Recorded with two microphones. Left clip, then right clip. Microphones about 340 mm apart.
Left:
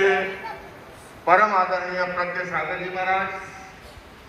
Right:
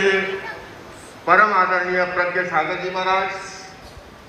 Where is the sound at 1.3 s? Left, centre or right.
Centre.